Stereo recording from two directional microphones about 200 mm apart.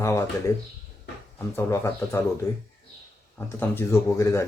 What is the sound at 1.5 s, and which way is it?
Speech, 15° left (ahead or behind).